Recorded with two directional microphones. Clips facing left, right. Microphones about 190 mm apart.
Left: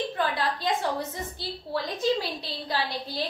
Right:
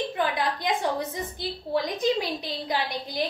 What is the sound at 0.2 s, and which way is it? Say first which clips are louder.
A woman's voice: right 1 dB; 15° right (ahead or behind).